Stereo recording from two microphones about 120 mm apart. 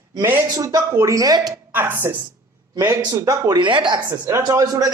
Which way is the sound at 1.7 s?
15° right (ahead or behind).